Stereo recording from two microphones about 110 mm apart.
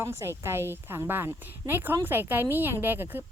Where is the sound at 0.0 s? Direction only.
25° right (ahead or behind).